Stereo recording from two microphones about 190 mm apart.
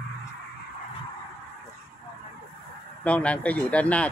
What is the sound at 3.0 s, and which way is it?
Speech, 5° left (ahead or behind).